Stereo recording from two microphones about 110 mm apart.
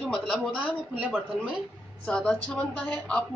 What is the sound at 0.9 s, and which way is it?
Speech, 10° right (ahead or behind).